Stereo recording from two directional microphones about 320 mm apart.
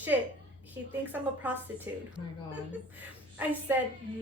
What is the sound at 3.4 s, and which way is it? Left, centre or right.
Speech, centre.